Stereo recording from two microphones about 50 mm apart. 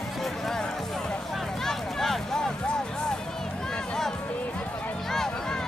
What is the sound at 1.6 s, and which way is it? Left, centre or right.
Music, centre.